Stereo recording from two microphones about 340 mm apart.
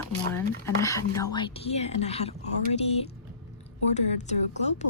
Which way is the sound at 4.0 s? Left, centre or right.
Centre.